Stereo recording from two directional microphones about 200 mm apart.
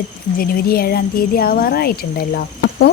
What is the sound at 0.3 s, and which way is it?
A woman's voice, 45° left (ahead or behind).